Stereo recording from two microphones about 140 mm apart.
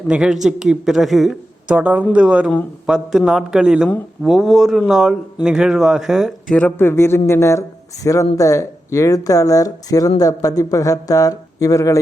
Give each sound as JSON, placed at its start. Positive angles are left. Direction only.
{"t": 0.1, "sound": "speech", "side_deg": -5}
{"t": 6.6, "sound": "speech", "side_deg": 15}